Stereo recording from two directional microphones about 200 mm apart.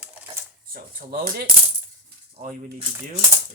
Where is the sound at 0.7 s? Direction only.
45° right (ahead or behind).